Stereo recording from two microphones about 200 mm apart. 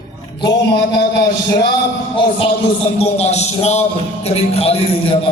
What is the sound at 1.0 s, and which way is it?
Speech, 55° left (ahead or behind).